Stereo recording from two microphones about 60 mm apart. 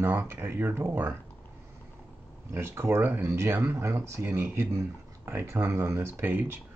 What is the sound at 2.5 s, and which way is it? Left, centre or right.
Speech, right.